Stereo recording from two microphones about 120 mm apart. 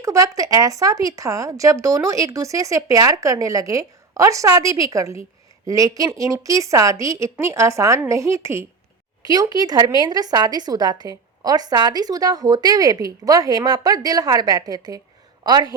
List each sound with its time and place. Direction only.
0.0 s a woman's voice: 25° right (ahead or behind)